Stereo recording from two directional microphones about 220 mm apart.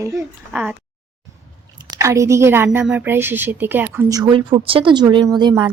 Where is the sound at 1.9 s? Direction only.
15° right (ahead or behind).